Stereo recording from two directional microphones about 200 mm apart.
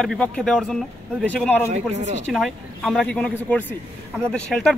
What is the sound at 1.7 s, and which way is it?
Speech, 35° right (ahead or behind).